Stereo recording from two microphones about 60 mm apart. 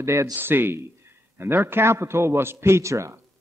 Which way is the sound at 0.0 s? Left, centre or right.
Right.